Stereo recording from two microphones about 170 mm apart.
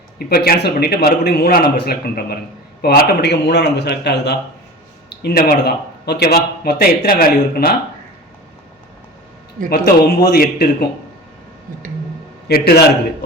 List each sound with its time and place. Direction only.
0.2 s a man's voice: 65° left (ahead or behind); by 4.4 s 85° left
5.0 s speech: 70° left (ahead or behind)
9.6 s speech: 60° left (ahead or behind)
12.5 s a man's voice: 65° left (ahead or behind)